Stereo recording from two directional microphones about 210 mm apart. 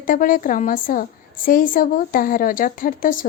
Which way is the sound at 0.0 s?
40° left (ahead or behind).